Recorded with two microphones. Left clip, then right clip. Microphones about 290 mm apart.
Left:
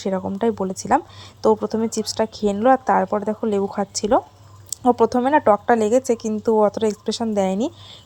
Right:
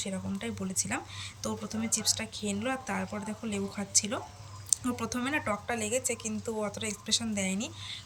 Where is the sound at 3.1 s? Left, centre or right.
Left.